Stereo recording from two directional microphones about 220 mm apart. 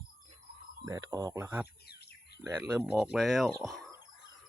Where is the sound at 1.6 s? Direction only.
45° left (ahead or behind).